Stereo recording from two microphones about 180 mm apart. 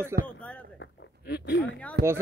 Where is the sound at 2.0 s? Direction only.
65° right (ahead or behind).